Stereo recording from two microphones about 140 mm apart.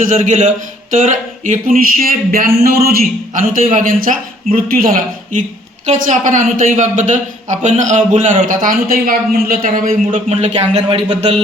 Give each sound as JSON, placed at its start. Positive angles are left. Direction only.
{"t": 0.0, "sound": "a man's voice", "side_deg": -65}
{"t": 3.4, "sound": "a man's voice", "side_deg": -70}
{"t": 10.3, "sound": "speech", "side_deg": -50}